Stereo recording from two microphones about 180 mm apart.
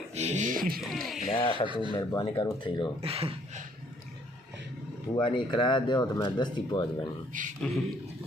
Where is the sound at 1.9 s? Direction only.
25° left (ahead or behind).